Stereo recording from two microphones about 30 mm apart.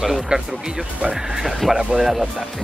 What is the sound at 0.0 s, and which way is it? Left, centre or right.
Speech, centre.